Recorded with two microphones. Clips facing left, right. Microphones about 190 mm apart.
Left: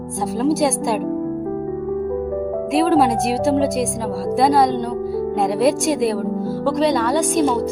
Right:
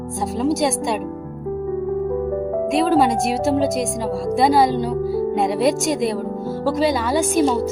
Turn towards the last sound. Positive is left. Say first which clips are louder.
# even
turn(degrees=-5)  # may be behind; listen again after turning